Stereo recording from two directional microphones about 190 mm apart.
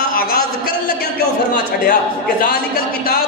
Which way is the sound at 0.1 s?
50° left (ahead or behind).